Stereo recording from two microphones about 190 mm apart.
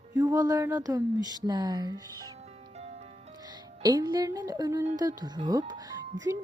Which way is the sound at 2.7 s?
35° right (ahead or behind).